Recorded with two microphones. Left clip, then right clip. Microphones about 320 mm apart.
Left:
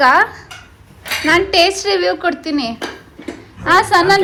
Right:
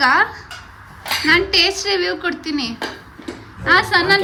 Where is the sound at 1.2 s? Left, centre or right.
Centre.